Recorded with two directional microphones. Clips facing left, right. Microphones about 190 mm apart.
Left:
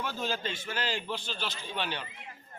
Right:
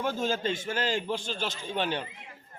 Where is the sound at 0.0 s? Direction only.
45° right (ahead or behind).